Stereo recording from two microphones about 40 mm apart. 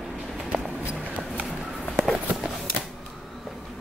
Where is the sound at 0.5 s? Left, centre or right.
Right.